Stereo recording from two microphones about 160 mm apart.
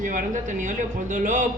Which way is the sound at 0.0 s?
55° right (ahead or behind).